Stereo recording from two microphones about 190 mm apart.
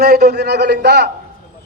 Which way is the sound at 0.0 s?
55° right (ahead or behind).